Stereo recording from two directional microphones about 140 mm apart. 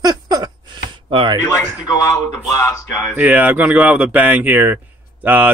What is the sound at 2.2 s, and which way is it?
Speech, 15° left (ahead or behind).